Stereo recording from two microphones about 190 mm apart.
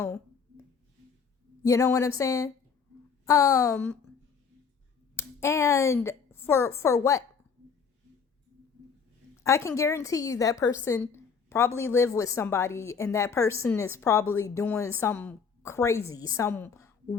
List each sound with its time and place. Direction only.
0.0 s a sound: 15° left (ahead or behind)
1.6 s a woman's voice: 15° left (ahead or behind)
5.1 s a woman's voice: 15° left (ahead or behind)
9.3 s a woman's voice: 15° left (ahead or behind)